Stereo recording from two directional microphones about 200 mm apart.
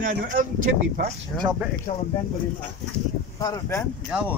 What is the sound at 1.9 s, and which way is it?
Speech, 35° left (ahead or behind).